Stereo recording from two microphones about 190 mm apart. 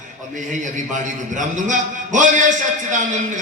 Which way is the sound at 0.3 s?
40° right (ahead or behind).